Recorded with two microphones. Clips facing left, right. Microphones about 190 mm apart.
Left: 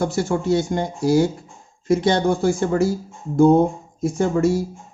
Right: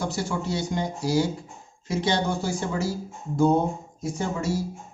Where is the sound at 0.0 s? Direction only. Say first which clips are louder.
Left 7 dB; 50° left (ahead or behind).